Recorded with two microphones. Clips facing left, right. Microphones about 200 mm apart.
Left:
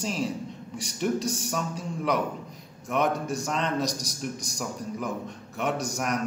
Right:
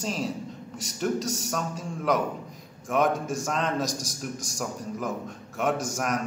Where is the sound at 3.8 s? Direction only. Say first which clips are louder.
Left 1 dB; 50° right (ahead or behind).